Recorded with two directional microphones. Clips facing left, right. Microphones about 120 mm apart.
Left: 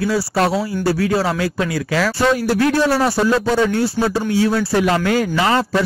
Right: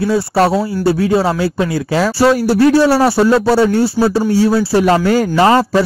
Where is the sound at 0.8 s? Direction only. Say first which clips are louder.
Right 5 dB; 25° right (ahead or behind).